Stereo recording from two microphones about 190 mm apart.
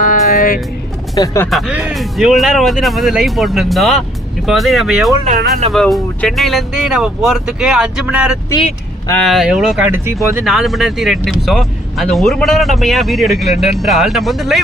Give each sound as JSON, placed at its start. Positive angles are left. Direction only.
{"t": 0.0, "sound": "music", "side_deg": 45}
{"t": 1.1, "sound": "speech", "side_deg": 15}
{"t": 1.5, "sound": "speech", "side_deg": 0}